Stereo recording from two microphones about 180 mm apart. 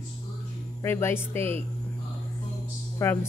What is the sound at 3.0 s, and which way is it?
Speech, 15° left (ahead or behind).